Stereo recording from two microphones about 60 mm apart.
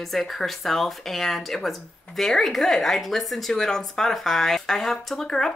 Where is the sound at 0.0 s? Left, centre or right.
Centre.